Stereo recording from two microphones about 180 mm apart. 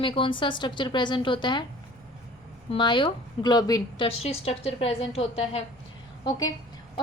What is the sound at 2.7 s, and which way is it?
A woman's voice, 25° left (ahead or behind).